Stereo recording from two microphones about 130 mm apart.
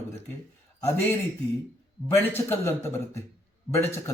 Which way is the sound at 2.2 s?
15° left (ahead or behind).